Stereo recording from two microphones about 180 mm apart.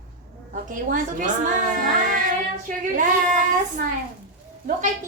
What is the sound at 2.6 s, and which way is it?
A woman's voice, 45° right (ahead or behind).